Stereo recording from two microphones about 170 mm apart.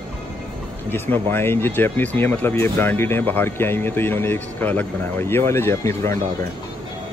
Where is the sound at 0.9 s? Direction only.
10° left (ahead or behind).